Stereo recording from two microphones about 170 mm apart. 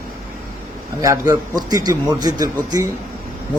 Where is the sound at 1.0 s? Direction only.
20° right (ahead or behind).